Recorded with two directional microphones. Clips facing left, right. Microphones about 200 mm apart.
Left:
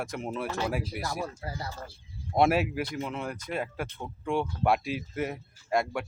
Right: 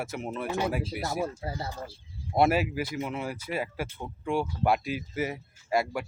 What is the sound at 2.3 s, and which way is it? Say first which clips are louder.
Speech: even; centre (ahead or behind).